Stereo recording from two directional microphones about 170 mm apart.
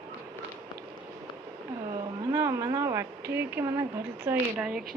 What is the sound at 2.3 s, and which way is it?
Speech, 15° right (ahead or behind).